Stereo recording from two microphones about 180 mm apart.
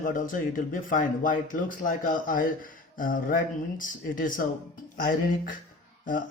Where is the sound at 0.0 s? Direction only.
50° left (ahead or behind).